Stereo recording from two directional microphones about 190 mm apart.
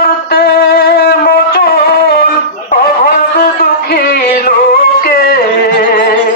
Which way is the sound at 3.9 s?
50° left (ahead or behind).